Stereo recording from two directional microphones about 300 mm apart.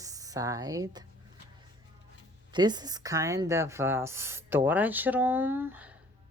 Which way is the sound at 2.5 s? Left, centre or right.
Centre.